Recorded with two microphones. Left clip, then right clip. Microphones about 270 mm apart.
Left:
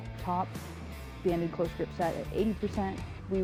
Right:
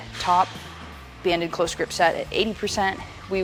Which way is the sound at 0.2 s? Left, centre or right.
Centre.